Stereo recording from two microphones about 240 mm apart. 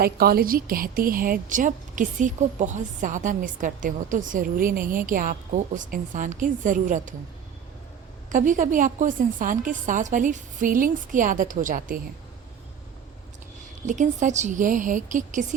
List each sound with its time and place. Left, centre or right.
0.0 s a woman's voice: right
8.3 s a woman's voice: right
13.8 s a woman's voice: right